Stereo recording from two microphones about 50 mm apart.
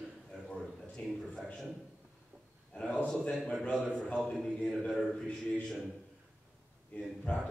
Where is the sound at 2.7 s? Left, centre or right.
Centre.